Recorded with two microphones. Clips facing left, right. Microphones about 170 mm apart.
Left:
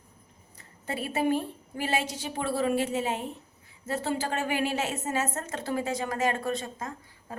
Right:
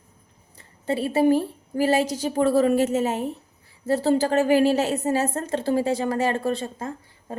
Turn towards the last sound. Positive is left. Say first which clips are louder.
# right 7 dB
turn(degrees=-30)  # may be behind; listen again after turning